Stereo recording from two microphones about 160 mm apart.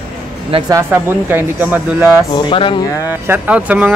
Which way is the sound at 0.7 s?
15° right (ahead or behind).